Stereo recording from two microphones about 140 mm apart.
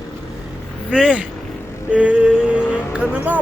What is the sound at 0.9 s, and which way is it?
Speech, 5° right (ahead or behind).